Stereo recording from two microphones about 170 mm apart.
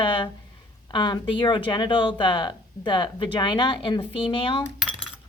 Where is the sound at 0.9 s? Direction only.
25° left (ahead or behind).